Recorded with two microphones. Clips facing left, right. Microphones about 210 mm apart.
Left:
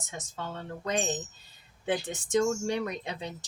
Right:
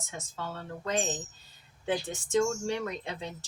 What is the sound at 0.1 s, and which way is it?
Speech, 15° left (ahead or behind).